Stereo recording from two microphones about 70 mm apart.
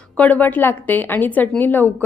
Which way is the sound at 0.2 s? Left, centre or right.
Left.